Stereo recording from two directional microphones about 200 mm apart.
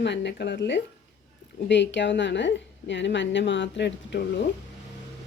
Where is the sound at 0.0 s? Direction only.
60° left (ahead or behind).